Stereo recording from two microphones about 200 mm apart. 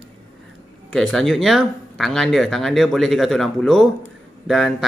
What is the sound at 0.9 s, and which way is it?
Speech, 5° left (ahead or behind).